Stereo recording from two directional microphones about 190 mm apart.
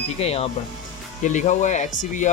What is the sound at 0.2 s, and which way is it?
Speech, 30° left (ahead or behind).